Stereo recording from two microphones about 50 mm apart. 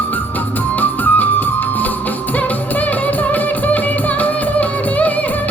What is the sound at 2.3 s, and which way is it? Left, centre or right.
Music, left.